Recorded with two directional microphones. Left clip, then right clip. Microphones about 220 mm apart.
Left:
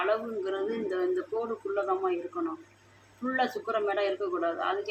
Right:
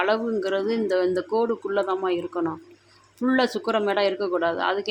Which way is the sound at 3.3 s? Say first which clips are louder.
Right 6 dB; 55° right (ahead or behind).